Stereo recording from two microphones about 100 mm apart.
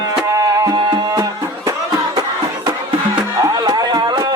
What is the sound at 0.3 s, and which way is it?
Music, 35° right (ahead or behind).